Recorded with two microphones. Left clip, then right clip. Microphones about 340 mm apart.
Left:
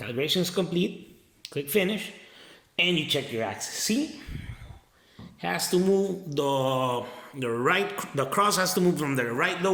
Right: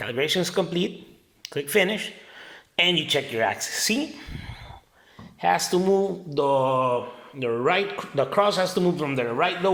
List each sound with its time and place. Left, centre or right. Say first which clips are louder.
0.0 s speech: right 3 dB; centre
5.4 s speech: right 5 dB; centre